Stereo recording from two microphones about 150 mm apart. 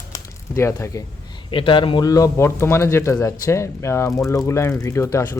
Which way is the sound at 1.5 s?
35° left (ahead or behind).